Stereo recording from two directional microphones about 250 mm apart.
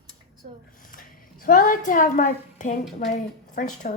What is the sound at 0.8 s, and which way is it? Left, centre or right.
A woman's voice, left.